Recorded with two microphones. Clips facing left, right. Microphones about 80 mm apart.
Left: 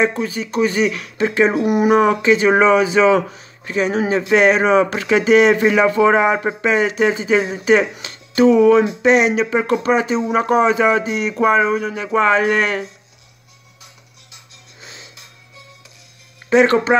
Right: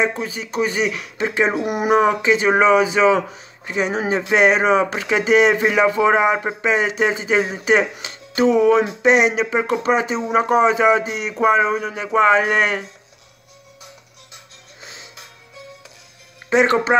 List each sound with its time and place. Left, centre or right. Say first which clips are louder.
0.0 s speech: left 3 dB; centre
14.8 s music: even; right
16.4 s speech: left 3 dB; centre